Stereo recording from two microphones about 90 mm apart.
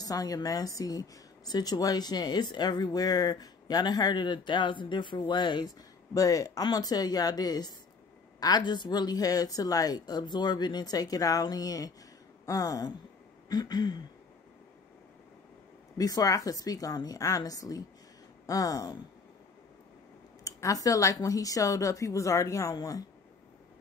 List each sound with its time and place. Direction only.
0.0 s a woman's voice: 40° left (ahead or behind)
16.0 s a woman's voice: 45° left (ahead or behind)
20.4 s speech: 40° left (ahead or behind)